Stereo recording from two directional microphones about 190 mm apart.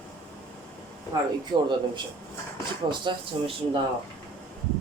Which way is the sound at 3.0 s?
25° right (ahead or behind).